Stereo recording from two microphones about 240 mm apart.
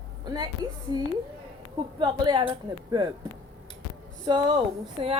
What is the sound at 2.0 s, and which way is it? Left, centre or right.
A woman's voice, centre.